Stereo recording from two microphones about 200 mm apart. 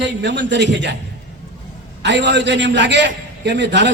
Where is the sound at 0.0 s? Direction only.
60° right (ahead or behind).